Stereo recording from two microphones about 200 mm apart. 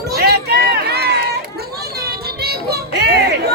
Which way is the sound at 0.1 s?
50° right (ahead or behind).